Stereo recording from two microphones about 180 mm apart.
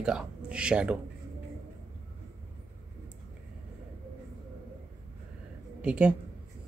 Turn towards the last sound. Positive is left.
turn(degrees=-5)  # may be behind; listen again after turning